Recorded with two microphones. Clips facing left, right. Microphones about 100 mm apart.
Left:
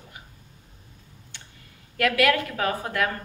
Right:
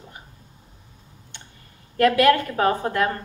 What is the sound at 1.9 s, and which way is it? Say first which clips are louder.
A woman's voice: right 5 dB; 35° right (ahead or behind).